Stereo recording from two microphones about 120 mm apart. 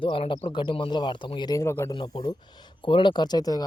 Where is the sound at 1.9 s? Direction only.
40° left (ahead or behind).